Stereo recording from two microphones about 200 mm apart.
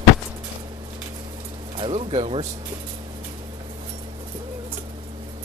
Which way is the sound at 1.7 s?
30° right (ahead or behind).